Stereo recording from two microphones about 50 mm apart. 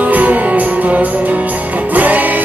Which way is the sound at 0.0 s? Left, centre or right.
Right.